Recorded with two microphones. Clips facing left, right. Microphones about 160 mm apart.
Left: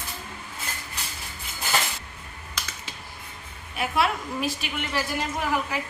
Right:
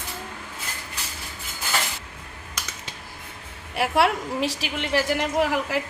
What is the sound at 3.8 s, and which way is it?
A woman's voice, 75° right (ahead or behind).